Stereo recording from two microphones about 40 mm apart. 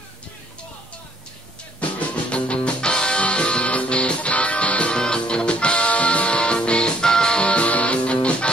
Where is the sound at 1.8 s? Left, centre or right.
Left.